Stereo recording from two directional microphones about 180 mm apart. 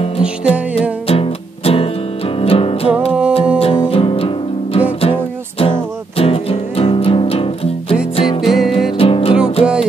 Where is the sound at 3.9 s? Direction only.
30° left (ahead or behind).